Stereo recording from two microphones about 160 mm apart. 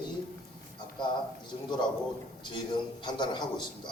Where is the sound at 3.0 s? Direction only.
30° left (ahead or behind).